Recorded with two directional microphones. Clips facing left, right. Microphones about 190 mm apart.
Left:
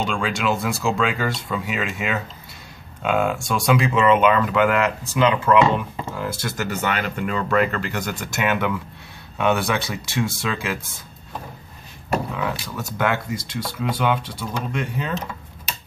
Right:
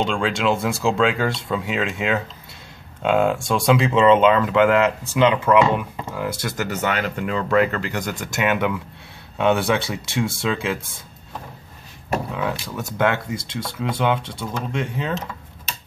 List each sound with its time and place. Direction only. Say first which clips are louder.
0.0 s speech: right 2 dB; 25° right (ahead or behind)
12.4 s speech: right 1 dB; 25° right (ahead or behind)